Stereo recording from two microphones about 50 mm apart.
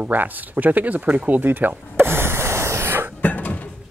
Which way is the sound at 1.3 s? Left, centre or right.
Right.